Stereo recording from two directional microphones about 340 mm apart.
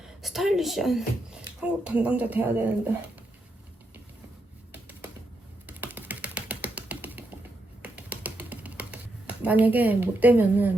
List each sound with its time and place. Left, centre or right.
0.2 s speech: centre
4.7 s typing: centre
5.6 s ratchet: centre
7.8 s a sound: centre